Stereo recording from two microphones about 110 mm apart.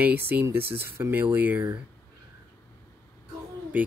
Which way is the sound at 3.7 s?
15° right (ahead or behind).